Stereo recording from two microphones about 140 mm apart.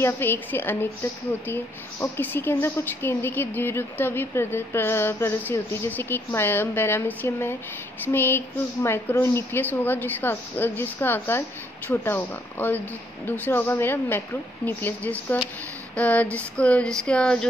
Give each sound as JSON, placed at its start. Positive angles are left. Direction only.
{"t": 0.0, "sound": "speech", "side_deg": 15}